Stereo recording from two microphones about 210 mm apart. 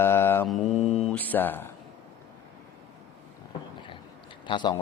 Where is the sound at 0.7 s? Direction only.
30° left (ahead or behind).